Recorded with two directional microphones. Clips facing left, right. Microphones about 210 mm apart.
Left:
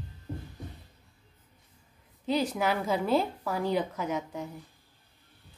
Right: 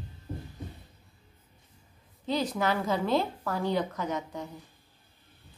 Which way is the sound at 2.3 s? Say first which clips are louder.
Left 1 dB; 10° left (ahead or behind).